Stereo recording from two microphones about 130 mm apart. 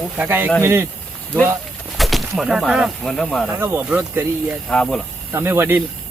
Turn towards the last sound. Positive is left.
turn(degrees=-15)  # may be behind; listen again after turning